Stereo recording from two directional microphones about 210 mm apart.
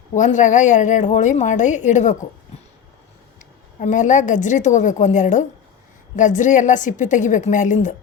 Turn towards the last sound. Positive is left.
turn(degrees=35)  # may be behind; listen again after turning